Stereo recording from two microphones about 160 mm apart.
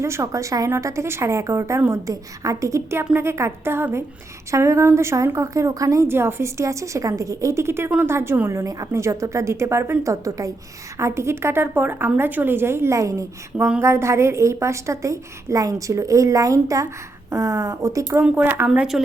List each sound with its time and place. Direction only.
0.0 s a woman's voice: 20° right (ahead or behind)